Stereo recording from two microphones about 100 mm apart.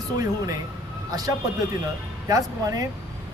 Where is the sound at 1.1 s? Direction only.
40° right (ahead or behind).